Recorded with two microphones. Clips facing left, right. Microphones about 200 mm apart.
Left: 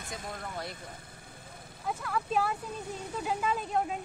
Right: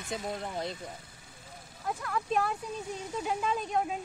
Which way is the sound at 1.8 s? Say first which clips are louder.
Even; 5° left (ahead or behind).